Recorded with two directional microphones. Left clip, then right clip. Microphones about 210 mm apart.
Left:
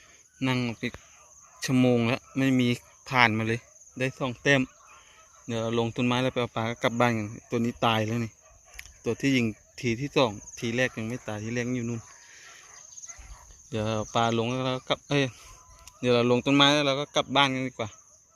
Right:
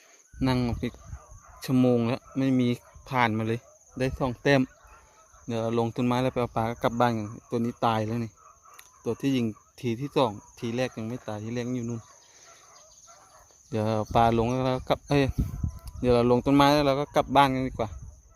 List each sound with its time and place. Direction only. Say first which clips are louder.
0.3 s speech: right 1 dB; 15° right (ahead or behind)
1.6 s speech: even; 5° right (ahead or behind)
3.9 s speech: right 1 dB; 15° right (ahead or behind); by 11.9 s centre (ahead or behind)
13.7 s speech: right 2 dB; 20° right (ahead or behind)